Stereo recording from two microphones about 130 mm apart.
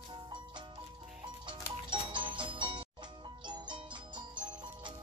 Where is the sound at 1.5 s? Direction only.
35° right (ahead or behind).